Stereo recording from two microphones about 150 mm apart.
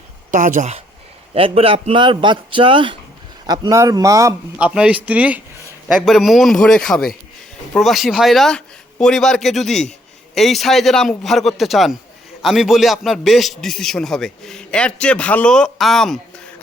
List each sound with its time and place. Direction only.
0.3 s speech: 55° right (ahead or behind)
1.3 s a man's voice: 40° right (ahead or behind); by 4.4 s 20° right (ahead or behind)
4.5 s a man's voice: 5° right (ahead or behind)